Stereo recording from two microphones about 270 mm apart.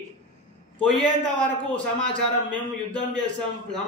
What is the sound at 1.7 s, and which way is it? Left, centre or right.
A man's voice, centre.